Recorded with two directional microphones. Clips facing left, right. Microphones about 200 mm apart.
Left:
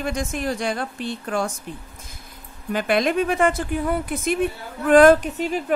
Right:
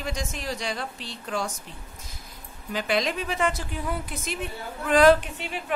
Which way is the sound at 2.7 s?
55° left (ahead or behind).